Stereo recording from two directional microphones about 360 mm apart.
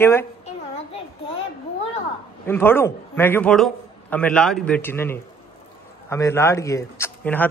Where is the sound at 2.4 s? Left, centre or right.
Centre.